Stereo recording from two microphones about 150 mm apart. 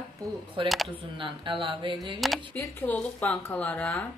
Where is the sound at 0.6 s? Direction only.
35° right (ahead or behind).